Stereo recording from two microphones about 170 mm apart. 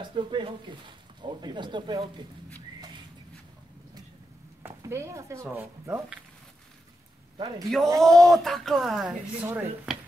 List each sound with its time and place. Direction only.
0.0 s speech: 30° right (ahead or behind)
4.6 s speech: 15° right (ahead or behind)
7.3 s a man's voice: 25° right (ahead or behind)
8.0 s a woman's voice: centre (ahead or behind)